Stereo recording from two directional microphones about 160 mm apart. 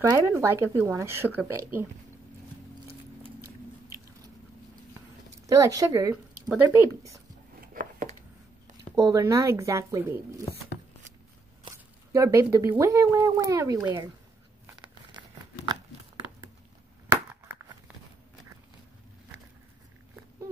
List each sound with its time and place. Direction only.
0.0 s speech: 20° right (ahead or behind)
5.5 s speech: 20° right (ahead or behind)
7.6 s a sound: 60° right (ahead or behind)
8.9 s speech: 20° right (ahead or behind)
11.7 s speech: 20° right (ahead or behind)
15.1 s tearing: 30° right (ahead or behind)